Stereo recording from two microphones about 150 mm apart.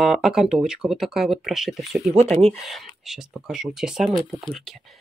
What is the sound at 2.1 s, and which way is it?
Speech, 45° right (ahead or behind).